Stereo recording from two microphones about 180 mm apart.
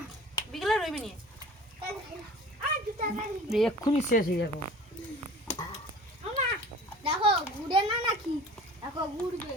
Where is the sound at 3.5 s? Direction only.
Centre (ahead or behind).